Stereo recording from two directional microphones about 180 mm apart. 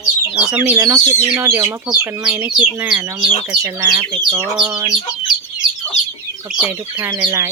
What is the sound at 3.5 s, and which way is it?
Speech, 25° right (ahead or behind).